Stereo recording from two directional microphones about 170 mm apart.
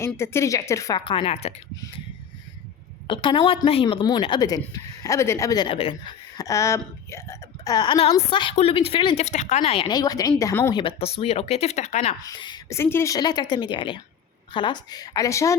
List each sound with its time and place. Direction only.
0.0 s speech: 15° left (ahead or behind); by 1.5 s 35° left (ahead or behind)
3.1 s speech: 30° left (ahead or behind)
5.6 s speech: 35° left (ahead or behind)
6.3 s speech: 20° left (ahead or behind)
9.2 s speech: 45° left (ahead or behind); by 10.8 s 15° left (ahead or behind)
10.8 s speech: 35° left (ahead or behind)
12.2 s speech: 25° left (ahead or behind)